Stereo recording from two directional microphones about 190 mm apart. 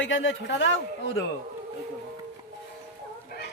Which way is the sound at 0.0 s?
75° left (ahead or behind).